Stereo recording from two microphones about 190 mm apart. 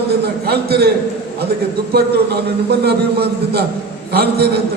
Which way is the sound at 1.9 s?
55° right (ahead or behind).